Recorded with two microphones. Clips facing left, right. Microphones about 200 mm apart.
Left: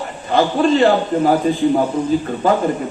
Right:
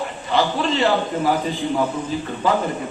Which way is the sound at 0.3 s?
50° left (ahead or behind).